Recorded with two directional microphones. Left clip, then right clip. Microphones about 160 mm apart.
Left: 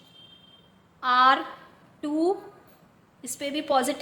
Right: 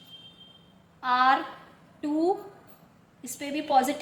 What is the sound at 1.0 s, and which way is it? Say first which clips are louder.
A woman's voice: left 3 dB; 20° left (ahead or behind).